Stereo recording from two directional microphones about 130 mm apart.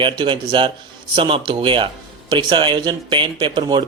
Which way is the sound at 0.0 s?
40° right (ahead or behind).